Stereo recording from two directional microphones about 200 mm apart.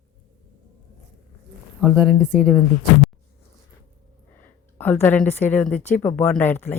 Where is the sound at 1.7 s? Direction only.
5° right (ahead or behind).